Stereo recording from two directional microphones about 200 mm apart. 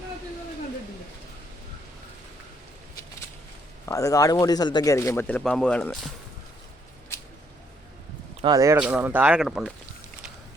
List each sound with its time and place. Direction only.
3.8 s a man's voice: 15° left (ahead or behind)
8.4 s speech: 20° right (ahead or behind); by 9.7 s centre (ahead or behind)